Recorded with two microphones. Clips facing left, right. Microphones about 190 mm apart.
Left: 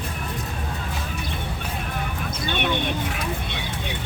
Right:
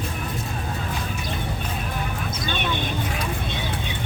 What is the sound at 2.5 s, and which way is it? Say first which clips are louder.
Vehicle: left 3 dB; 65° left (ahead or behind).